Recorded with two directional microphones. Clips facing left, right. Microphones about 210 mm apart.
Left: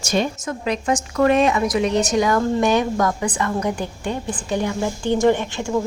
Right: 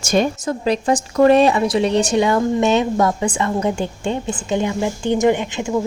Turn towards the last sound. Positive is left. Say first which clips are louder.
# right 2 dB
turn(degrees=-15)  # may be behind; listen again after turning